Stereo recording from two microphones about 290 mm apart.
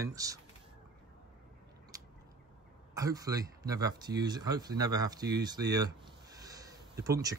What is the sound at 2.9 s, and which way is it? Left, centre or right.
Speech, centre.